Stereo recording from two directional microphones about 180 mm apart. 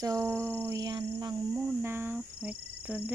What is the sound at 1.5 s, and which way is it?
Cricket, 10° right (ahead or behind).